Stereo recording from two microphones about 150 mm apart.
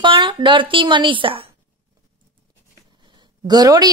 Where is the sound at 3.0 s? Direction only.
30° right (ahead or behind).